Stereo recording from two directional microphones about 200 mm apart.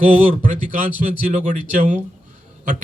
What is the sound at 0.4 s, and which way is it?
A man's voice, 40° right (ahead or behind).